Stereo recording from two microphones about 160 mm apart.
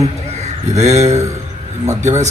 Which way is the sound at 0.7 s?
45° right (ahead or behind).